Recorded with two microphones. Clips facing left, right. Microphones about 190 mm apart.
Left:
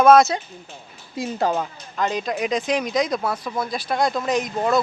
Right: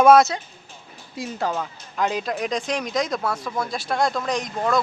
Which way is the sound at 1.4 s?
30° left (ahead or behind).